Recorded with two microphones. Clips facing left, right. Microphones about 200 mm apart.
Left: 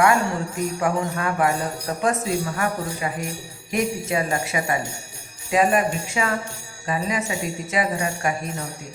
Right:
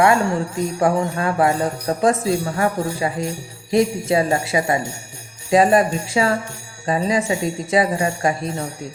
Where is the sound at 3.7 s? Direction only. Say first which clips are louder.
Right 6 dB; 30° right (ahead or behind).